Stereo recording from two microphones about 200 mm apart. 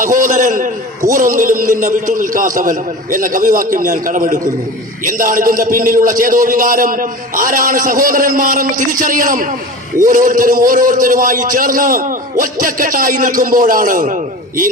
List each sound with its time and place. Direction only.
0.0 s a man's voice: 40° right (ahead or behind)